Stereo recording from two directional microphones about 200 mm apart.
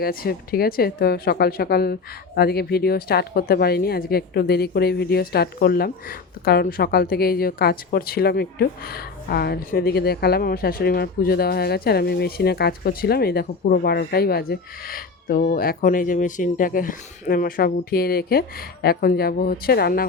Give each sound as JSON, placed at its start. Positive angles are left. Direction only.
{"t": 0.0, "sound": "a woman's voice", "side_deg": 50}